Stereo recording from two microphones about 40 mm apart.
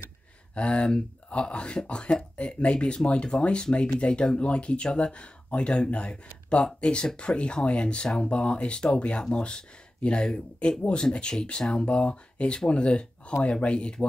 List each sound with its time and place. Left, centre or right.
0.6 s speech: left